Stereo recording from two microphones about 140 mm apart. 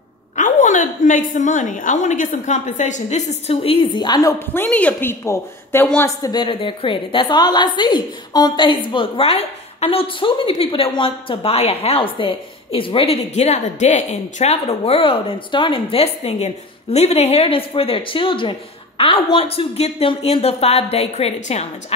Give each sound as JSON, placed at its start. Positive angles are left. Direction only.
{"t": 0.4, "sound": "a woman's voice", "side_deg": 65}
{"t": 4.6, "sound": "a woman's voice", "side_deg": 10}
{"t": 6.0, "sound": "a woman's voice", "side_deg": 30}